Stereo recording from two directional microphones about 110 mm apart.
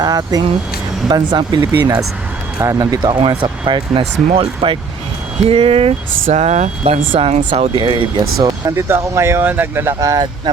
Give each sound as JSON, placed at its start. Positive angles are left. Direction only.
{"t": 0.0, "sound": "speech", "side_deg": -35}
{"t": 6.3, "sound": "speech", "side_deg": -90}
{"t": 7.8, "sound": "speech", "side_deg": -45}
{"t": 8.7, "sound": "speech", "side_deg": -25}